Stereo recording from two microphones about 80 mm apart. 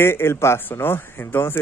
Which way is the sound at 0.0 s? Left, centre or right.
Left.